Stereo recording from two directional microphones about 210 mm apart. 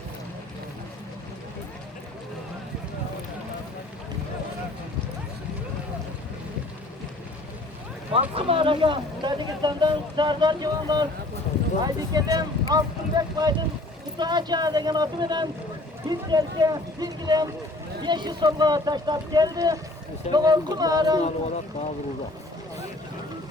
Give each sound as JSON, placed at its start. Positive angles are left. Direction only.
{"t": 8.1, "sound": "speech", "side_deg": -25}